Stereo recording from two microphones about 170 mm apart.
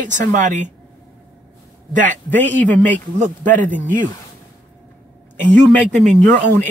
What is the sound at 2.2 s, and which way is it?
Speech, 10° left (ahead or behind).